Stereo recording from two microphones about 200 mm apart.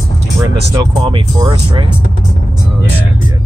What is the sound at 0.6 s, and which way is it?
Speech, 25° right (ahead or behind).